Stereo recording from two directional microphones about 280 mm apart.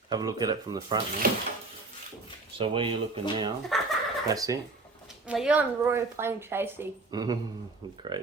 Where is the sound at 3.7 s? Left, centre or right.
Centre.